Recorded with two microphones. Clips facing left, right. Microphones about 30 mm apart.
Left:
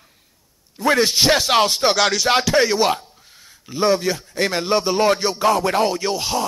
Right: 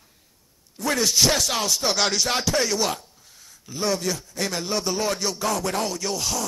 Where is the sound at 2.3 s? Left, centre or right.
Left.